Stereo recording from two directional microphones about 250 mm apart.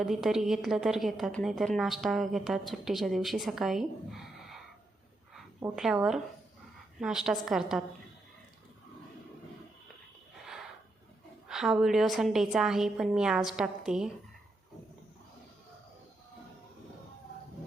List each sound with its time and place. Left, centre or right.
0.0 s a woman's voice: centre
5.3 s a woman's voice: centre
11.4 s a woman's voice: centre